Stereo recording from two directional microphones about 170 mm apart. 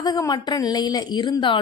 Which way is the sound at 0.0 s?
20° left (ahead or behind).